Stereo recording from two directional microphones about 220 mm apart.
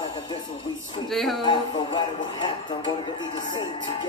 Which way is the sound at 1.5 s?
20° left (ahead or behind).